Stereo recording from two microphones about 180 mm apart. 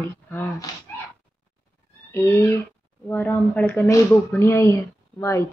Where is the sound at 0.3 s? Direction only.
10° left (ahead or behind).